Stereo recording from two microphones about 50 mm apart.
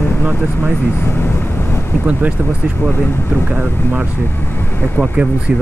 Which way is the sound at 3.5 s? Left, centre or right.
Right.